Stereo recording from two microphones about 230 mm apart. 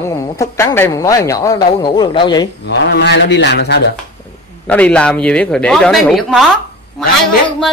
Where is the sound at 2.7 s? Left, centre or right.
Left.